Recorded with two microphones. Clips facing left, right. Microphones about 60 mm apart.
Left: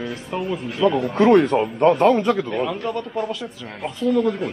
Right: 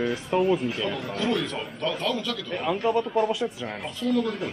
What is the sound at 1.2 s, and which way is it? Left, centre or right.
A man's voice, left.